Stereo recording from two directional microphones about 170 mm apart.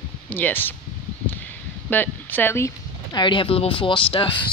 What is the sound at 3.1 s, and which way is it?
Speech, 30° left (ahead or behind).